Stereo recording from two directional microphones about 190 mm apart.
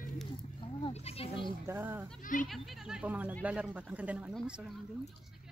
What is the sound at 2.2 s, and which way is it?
Speech, 45° left (ahead or behind).